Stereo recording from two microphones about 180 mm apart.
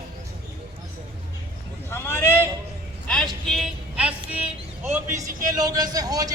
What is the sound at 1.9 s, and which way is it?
Speech, 15° left (ahead or behind).